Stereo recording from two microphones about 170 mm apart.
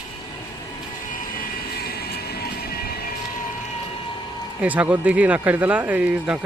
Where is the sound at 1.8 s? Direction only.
65° left (ahead or behind).